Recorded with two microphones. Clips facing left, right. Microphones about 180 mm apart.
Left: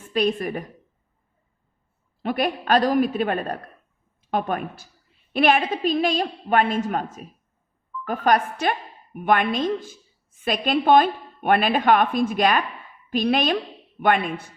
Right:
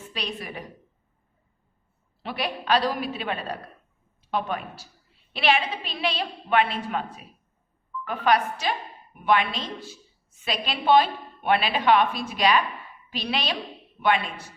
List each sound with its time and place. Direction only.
0.1 s a woman's voice: 50° left (ahead or behind)
2.2 s a woman's voice: 50° left (ahead or behind)